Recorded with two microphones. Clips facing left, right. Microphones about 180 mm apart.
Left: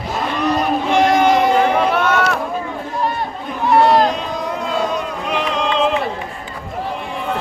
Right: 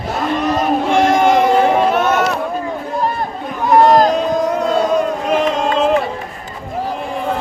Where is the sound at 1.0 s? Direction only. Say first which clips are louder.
Right 1 dB; 45° right (ahead or behind).